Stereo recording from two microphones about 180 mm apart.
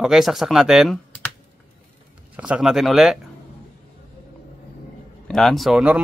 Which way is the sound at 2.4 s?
5° right (ahead or behind).